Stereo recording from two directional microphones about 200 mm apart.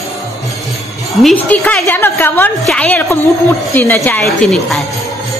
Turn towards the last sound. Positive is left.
turn(degrees=0)  # may be behind; listen again after turning